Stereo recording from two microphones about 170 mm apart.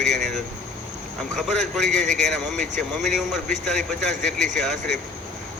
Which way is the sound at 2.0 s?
45° right (ahead or behind).